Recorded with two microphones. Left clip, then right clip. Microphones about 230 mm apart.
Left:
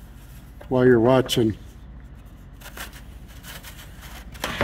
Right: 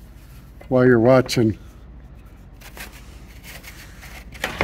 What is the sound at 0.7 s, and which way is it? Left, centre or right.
Speech, right.